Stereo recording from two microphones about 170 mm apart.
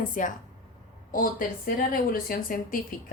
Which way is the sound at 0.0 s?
50° left (ahead or behind).